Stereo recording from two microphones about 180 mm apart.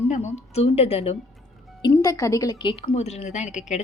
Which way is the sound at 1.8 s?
20° left (ahead or behind).